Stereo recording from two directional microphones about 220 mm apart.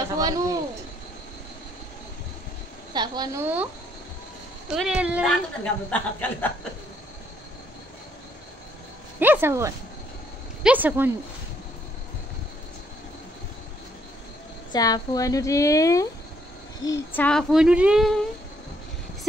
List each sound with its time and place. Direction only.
0.2 s speech: 15° right (ahead or behind)
2.9 s a woman's voice: 20° right (ahead or behind)
4.6 s speech: centre (ahead or behind)
9.2 s speech: 10° right (ahead or behind)
14.7 s a woman's voice: 15° left (ahead or behind); by 18.2 s centre (ahead or behind)